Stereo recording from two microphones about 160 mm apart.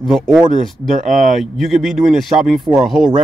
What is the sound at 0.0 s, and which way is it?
Speech, centre (ahead or behind).